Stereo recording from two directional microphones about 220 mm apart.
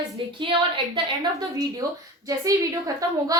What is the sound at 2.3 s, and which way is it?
A woman's voice, 15° right (ahead or behind).